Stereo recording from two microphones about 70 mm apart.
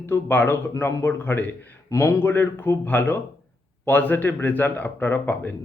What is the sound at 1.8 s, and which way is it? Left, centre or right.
A man's voice, left.